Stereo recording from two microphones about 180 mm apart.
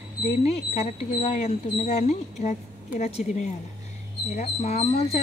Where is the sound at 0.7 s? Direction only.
35° left (ahead or behind).